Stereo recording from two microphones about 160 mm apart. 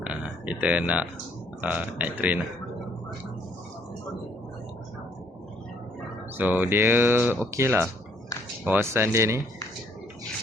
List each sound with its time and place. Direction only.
0.0 s a sound: 10° right (ahead or behind)
1.6 s speech: 10° right (ahead or behind)
6.3 s speech: 10° right (ahead or behind)